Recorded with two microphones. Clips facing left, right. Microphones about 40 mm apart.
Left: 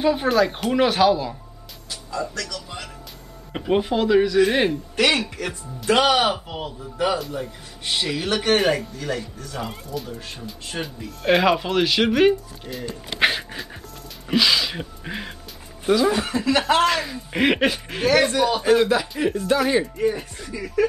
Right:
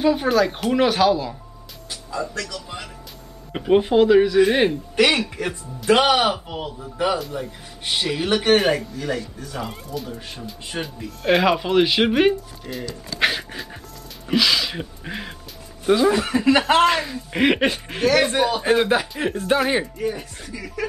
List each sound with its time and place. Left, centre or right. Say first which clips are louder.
0.0 s speech: right 1 dB; centre
1.9 s music: even; centre
2.4 s a man's voice: right 1 dB; centre
6.2 s speech: right 1 dB; centre
11.8 s a man's voice: left 1 dB; centre
13.2 s pant: left 1 dB; centre
14.2 s speech: even; centre
15.9 s a man's voice: right 2 dB; centre
17.0 s speech: right 1 dB; centre
18.6 s a man's voice: left 1 dB; right
20.0 s speech: left 3 dB; centre